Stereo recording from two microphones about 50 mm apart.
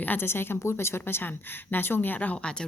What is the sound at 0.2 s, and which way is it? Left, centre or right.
Speech, left.